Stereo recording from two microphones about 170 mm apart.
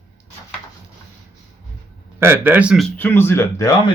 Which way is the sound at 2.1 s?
15° right (ahead or behind).